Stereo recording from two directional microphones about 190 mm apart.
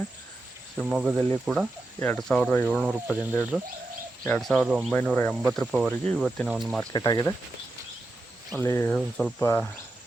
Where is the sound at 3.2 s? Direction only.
15° left (ahead or behind).